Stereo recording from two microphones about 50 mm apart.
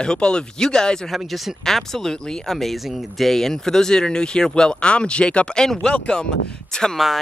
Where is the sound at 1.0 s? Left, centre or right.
Centre.